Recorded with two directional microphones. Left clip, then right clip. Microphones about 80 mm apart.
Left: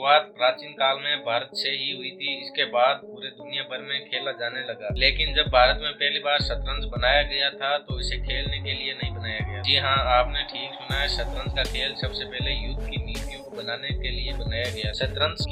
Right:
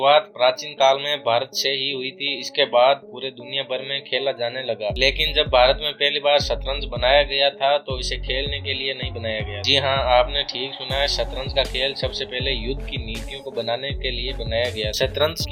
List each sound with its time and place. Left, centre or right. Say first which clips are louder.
0.0 s speech: right 4 dB; right
14.9 s speech: right 5 dB; right